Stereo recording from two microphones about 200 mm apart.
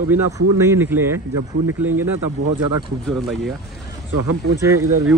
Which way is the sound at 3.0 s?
Centre (ahead or behind).